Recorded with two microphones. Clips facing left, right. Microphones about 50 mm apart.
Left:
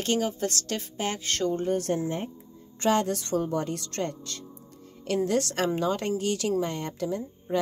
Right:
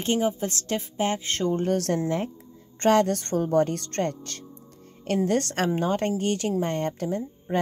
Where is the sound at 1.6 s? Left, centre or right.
Right.